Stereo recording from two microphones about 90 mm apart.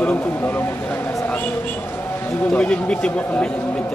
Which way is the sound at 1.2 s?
20° left (ahead or behind).